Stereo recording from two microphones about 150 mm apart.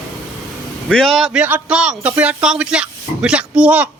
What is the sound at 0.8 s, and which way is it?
A man's voice, centre (ahead or behind).